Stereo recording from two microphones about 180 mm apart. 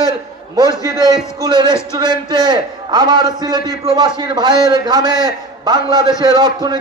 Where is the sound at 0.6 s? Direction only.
20° right (ahead or behind).